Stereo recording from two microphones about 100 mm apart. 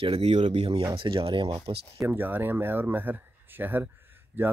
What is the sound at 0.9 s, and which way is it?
Speech, 60° right (ahead or behind).